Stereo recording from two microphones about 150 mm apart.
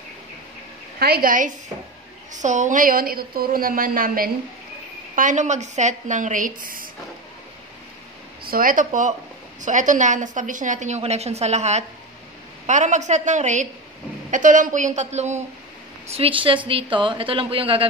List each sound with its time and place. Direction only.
0.9 s a woman's voice: 90° right; by 1.5 s 65° right (ahead or behind)
2.3 s a woman's voice: 55° right (ahead or behind); by 4.3 s 70° right (ahead or behind)
5.1 s a woman's voice: 55° right (ahead or behind)
8.5 s a woman's voice: 70° right (ahead or behind); by 15.4 s 50° right (ahead or behind)
16.1 s a woman's voice: 40° right (ahead or behind)